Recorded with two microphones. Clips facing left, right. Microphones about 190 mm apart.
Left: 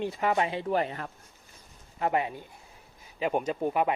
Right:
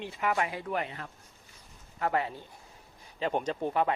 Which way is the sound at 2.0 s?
20° left (ahead or behind).